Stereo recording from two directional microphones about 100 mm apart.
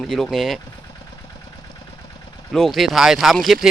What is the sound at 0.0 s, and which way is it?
Speech, centre (ahead or behind).